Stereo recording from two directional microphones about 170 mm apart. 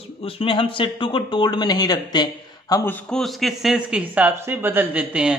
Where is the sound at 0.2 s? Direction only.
35° left (ahead or behind).